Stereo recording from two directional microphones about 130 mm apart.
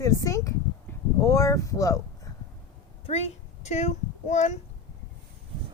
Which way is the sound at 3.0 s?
55° left (ahead or behind).